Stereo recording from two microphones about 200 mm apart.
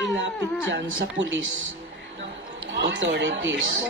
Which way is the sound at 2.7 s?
65° right (ahead or behind).